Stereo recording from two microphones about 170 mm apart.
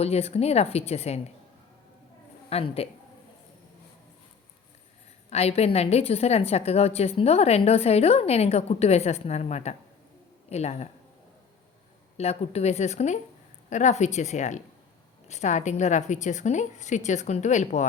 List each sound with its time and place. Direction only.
0.0 s a woman's voice: 35° left (ahead or behind)
2.5 s a woman's voice: 35° left (ahead or behind)
5.3 s a woman's voice: 35° left (ahead or behind)
12.1 s a woman's voice: 40° left (ahead or behind)